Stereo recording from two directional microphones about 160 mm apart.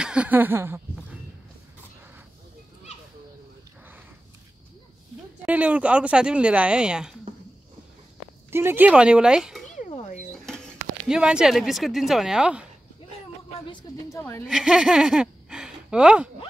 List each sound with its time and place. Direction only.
0.0 s speech: 5° right (ahead or behind)
5.4 s speech: 10° right (ahead or behind)
8.5 s speech: 15° right (ahead or behind)
9.7 s a sound: 50° left (ahead or behind)
11.1 s speech: 5° right (ahead or behind)
14.0 s a woman's voice: 15° left (ahead or behind)
14.5 s speech: 5° right (ahead or behind)